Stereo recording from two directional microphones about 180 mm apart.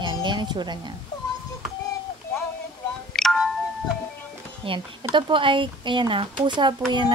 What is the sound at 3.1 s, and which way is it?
Music, centre (ahead or behind).